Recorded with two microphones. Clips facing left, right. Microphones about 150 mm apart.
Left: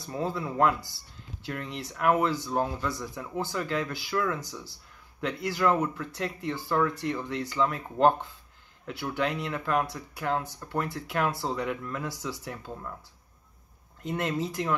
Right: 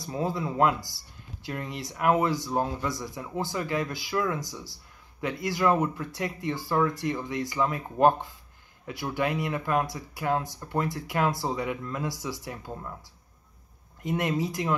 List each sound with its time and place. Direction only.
0.0 s speech: 15° right (ahead or behind)
14.0 s speech: 15° right (ahead or behind)